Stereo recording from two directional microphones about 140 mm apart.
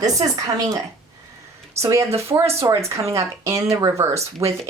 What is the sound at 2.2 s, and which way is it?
Speech, 20° right (ahead or behind).